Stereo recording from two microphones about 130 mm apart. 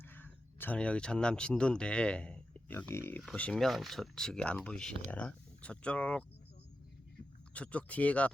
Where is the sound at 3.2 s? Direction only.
5° left (ahead or behind).